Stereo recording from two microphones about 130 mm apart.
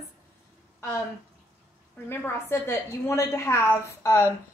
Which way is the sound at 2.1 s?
20° left (ahead or behind).